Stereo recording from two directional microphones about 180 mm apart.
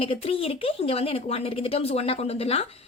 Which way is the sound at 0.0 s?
30° left (ahead or behind).